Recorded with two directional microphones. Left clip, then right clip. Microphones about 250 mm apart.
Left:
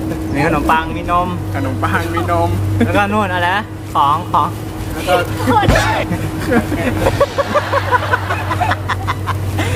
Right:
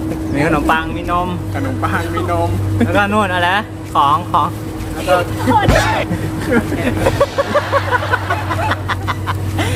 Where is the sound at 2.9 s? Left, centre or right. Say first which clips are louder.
Right 1 dB; centre.